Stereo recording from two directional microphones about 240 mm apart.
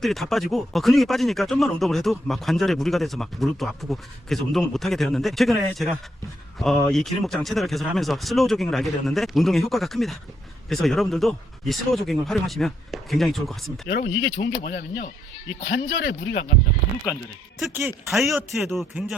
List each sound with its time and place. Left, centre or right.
0.0 s speech: centre
14.1 s speech: left
17.6 s speech: centre